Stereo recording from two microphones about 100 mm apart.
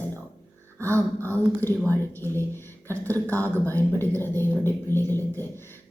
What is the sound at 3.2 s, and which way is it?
Speech, 20° left (ahead or behind).